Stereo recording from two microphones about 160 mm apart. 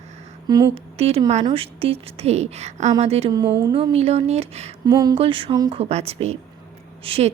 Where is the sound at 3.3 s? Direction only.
20° right (ahead or behind).